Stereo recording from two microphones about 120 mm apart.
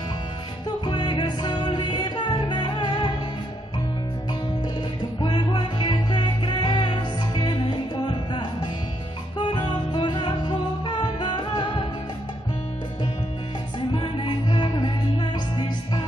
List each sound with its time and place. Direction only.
0.8 s music: 40° left (ahead or behind)
5.2 s music: 40° left (ahead or behind)
13.9 s music: 40° left (ahead or behind)